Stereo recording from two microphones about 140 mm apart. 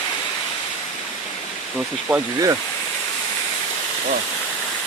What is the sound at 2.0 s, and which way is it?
Speech, 20° right (ahead or behind).